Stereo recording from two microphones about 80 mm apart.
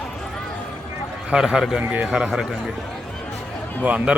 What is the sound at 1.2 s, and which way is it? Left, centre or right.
A man's voice, centre.